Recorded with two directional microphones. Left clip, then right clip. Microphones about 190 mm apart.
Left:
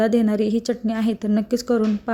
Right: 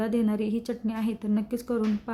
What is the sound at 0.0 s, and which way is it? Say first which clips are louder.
A woman's voice: left 9 dB; 25° left (ahead or behind).